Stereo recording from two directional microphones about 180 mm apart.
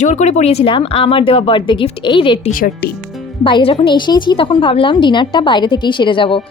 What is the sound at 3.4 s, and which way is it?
A woman's voice, 30° left (ahead or behind).